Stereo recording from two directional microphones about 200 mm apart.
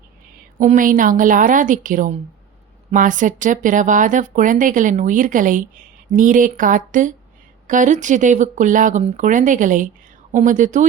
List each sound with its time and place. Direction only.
0.6 s speech: 40° right (ahead or behind)